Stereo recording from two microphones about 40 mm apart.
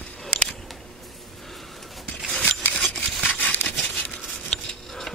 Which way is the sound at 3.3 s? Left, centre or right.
Left.